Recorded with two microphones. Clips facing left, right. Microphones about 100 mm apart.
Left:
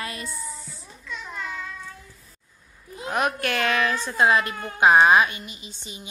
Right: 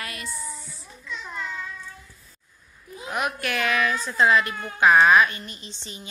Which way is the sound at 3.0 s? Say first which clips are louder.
Left 3 dB; 35° left (ahead or behind).